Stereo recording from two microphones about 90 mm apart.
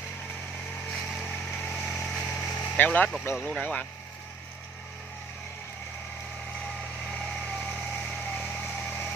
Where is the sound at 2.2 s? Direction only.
20° left (ahead or behind).